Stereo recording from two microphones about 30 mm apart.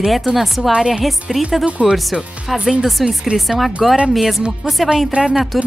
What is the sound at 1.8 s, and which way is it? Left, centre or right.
Speech, right.